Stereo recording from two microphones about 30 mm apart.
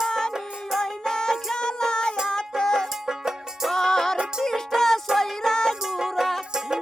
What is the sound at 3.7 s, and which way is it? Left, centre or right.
Music, centre.